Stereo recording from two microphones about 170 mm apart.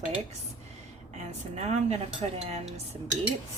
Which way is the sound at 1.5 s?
40° right (ahead or behind).